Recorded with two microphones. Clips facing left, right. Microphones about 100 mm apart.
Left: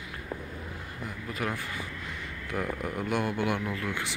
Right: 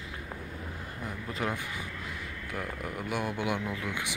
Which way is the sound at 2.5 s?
Centre (ahead or behind).